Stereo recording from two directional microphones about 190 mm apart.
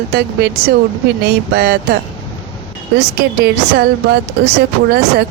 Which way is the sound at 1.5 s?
60° right (ahead or behind).